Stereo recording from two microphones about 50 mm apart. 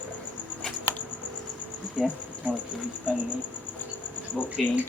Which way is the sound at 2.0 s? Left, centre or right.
Right.